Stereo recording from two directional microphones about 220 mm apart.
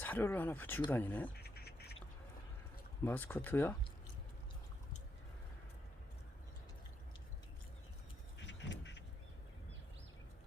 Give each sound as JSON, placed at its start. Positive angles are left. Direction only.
{"t": 0.0, "sound": "speech", "side_deg": 10}
{"t": 1.4, "sound": "duck", "side_deg": 45}
{"t": 3.0, "sound": "speech", "side_deg": 10}
{"t": 8.4, "sound": "duck", "side_deg": 55}